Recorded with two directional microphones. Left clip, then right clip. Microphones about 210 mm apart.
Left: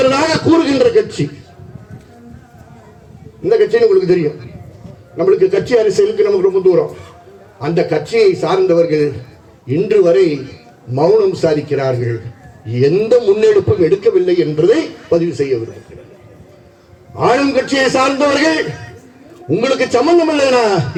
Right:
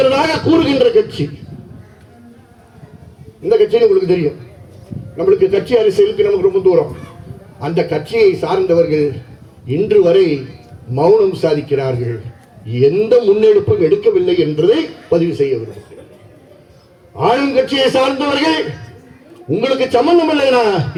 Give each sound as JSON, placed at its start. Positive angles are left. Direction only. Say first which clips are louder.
{"t": 0.0, "sound": "a man's voice", "louder": "even", "side_deg": 35}
{"t": 3.5, "sound": "a man's voice", "louder": "even", "side_deg": 35}
{"t": 17.2, "sound": "a man's voice", "louder": "even", "side_deg": 35}